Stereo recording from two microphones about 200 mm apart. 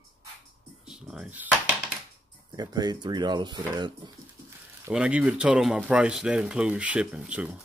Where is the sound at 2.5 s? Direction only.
20° right (ahead or behind).